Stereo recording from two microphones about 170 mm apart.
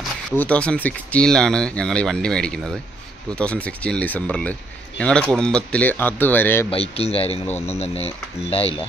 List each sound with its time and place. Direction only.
0.4 s speech: 5° left (ahead or behind)
6.7 s speech: 35° left (ahead or behind)